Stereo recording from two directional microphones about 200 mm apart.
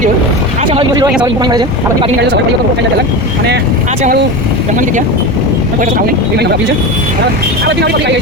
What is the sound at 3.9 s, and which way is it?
Speech, 40° right (ahead or behind).